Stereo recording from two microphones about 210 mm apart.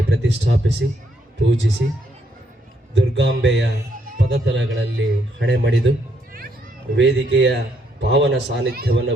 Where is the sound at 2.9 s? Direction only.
55° right (ahead or behind).